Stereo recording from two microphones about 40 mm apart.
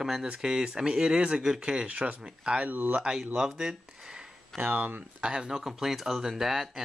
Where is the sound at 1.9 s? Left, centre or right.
Right.